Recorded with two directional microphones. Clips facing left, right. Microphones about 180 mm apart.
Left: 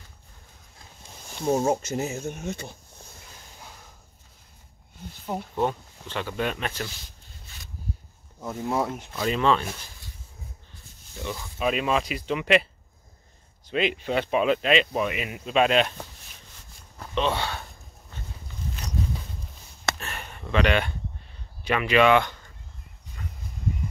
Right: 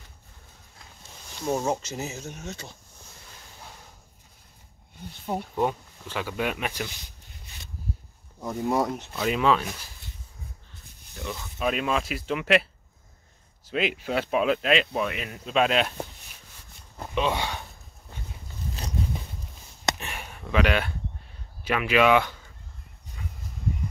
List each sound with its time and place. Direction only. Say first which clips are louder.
1.6 s speech: left 4 dB; 50° left (ahead or behind)
5.5 s speech: left 1 dB; 5° right (ahead or behind)
8.5 s speech: right 2 dB; centre (ahead or behind)
9.2 s speech: even; 5° right (ahead or behind)
11.1 s speech: left 1 dB; centre (ahead or behind)
13.7 s speech: left 2 dB; 5° right (ahead or behind)
17.1 s speech: even; 10° right (ahead or behind)
19.9 s a sound: right 1 dB; 15° right (ahead or behind)
21.6 s speech: left 1 dB; 5° right (ahead or behind)
23.2 s a sound: even; 5° right (ahead or behind)